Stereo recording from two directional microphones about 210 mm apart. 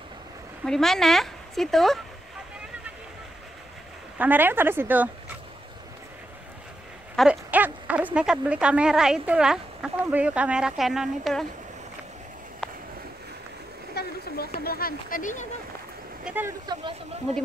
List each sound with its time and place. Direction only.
0.7 s speech: centre (ahead or behind)
4.2 s speech: 10° right (ahead or behind)
7.2 s speech: 5° right (ahead or behind)
13.9 s a sound: 50° left (ahead or behind)
14.6 s speech: 45° left (ahead or behind)
16.3 s speech: 10° right (ahead or behind)